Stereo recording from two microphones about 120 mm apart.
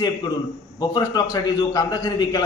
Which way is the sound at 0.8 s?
35° left (ahead or behind).